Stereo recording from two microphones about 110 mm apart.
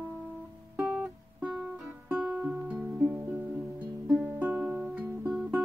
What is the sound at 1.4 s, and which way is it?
Music, 5° right (ahead or behind).